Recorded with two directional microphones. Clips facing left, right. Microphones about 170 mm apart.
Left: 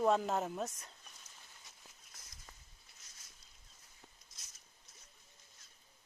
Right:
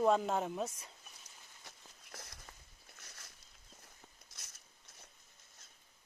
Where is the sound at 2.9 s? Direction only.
70° right (ahead or behind).